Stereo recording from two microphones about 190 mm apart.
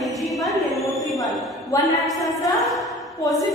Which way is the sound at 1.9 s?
Centre (ahead or behind).